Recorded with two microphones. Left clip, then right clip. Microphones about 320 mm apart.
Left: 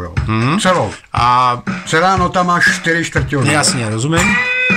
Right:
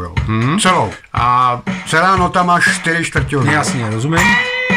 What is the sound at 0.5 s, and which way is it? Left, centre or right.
Speech, centre.